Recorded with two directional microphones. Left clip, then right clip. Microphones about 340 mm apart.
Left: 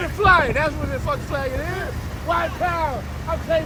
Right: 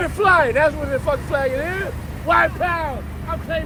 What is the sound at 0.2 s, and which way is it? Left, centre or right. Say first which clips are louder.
Speech: right 1 dB; right.